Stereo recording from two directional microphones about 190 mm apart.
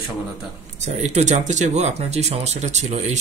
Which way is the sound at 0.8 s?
35° right (ahead or behind).